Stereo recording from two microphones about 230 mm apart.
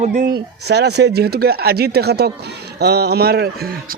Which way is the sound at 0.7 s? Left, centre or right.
Right.